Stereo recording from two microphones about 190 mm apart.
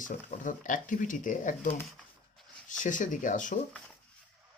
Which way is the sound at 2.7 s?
40° left (ahead or behind).